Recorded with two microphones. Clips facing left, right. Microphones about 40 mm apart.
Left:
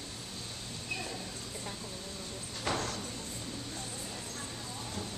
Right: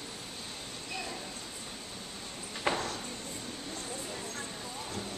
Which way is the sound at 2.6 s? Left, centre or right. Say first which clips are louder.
Right 2 dB; right.